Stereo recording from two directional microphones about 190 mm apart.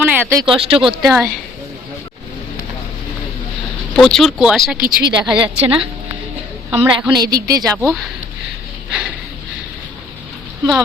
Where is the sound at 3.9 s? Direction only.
Centre (ahead or behind).